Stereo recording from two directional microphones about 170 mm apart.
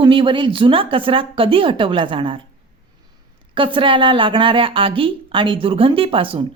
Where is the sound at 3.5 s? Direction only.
30° right (ahead or behind).